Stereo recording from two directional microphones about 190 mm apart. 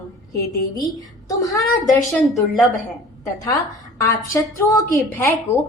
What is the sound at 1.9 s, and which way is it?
Speech, 15° left (ahead or behind).